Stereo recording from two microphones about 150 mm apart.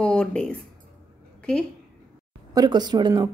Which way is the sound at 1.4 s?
5° left (ahead or behind).